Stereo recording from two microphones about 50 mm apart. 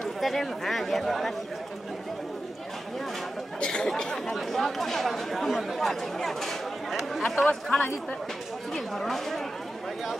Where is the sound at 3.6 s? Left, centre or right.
Centre.